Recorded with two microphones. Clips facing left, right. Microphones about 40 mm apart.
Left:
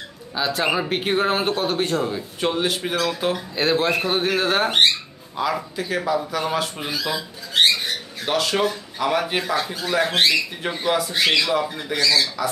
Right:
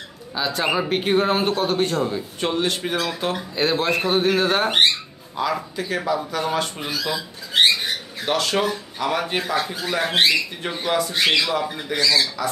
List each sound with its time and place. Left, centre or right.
0.3 s speech: centre
8.3 s speech: centre
10.0 s speech: centre
10.6 s speech: centre
11.9 s speech: centre